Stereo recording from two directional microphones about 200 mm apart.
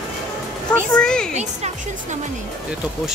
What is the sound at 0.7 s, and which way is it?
Speech, 5° left (ahead or behind).